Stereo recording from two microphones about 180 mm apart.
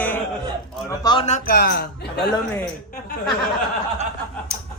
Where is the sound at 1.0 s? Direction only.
25° left (ahead or behind).